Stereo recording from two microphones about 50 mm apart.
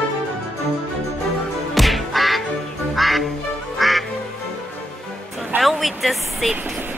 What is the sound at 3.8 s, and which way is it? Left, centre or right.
Quack, centre.